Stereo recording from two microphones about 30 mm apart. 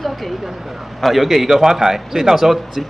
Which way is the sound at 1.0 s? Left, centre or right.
Centre.